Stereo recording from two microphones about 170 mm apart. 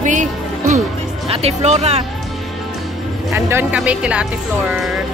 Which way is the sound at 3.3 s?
15° right (ahead or behind).